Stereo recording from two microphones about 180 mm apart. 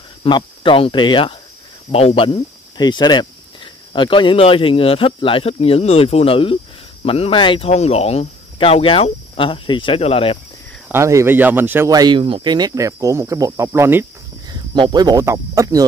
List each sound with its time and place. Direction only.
0.2 s speech: 30° left (ahead or behind)
10.9 s speech: 15° right (ahead or behind)
14.5 s speech: 25° right (ahead or behind)